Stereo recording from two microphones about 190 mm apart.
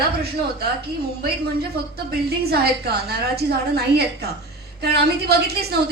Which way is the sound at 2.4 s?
55° right (ahead or behind).